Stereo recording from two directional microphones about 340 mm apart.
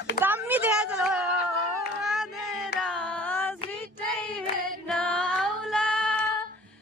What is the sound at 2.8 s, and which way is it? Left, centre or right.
Carnatic music, centre.